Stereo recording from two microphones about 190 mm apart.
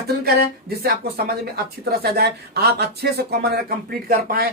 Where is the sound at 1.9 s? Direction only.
55° right (ahead or behind).